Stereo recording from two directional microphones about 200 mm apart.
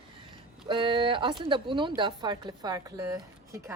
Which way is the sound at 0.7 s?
25° right (ahead or behind).